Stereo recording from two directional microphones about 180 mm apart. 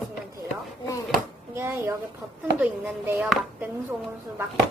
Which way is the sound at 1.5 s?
15° right (ahead or behind).